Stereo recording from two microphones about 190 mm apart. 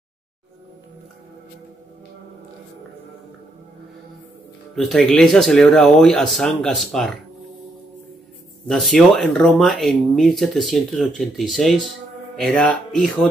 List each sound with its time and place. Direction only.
4.7 s speech: centre (ahead or behind)
8.6 s speech: centre (ahead or behind)